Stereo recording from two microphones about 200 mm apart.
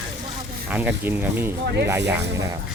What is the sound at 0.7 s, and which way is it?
Speech, 10° right (ahead or behind).